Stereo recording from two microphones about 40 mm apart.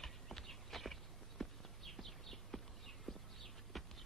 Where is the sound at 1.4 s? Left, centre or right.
Centre.